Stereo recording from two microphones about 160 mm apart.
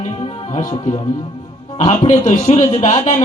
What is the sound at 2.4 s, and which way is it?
Speech, 45° left (ahead or behind).